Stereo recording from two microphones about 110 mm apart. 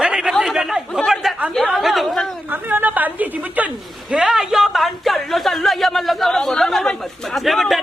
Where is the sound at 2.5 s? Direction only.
15° right (ahead or behind).